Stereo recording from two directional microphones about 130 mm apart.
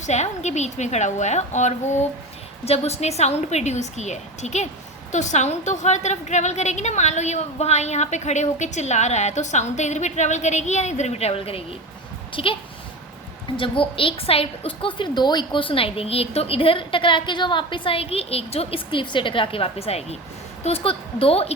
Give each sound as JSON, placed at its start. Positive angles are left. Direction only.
{"t": 0.0, "sound": "a woman's voice", "side_deg": 60}
{"t": 2.6, "sound": "a woman's voice", "side_deg": 55}
{"t": 13.6, "sound": "a woman's voice", "side_deg": 45}